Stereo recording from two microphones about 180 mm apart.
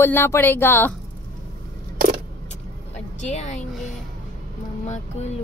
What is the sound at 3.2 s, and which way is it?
Speech, 40° left (ahead or behind).